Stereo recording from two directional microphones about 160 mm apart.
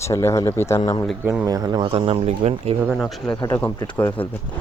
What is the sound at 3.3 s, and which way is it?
Speech, 20° left (ahead or behind).